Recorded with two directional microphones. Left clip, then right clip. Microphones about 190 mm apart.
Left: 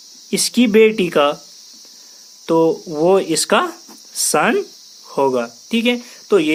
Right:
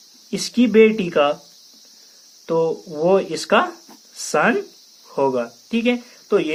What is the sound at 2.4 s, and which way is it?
Speech, 45° left (ahead or behind).